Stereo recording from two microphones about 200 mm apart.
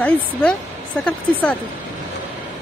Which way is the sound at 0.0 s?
5° left (ahead or behind).